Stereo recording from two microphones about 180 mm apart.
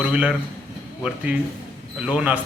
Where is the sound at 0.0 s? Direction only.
5° right (ahead or behind).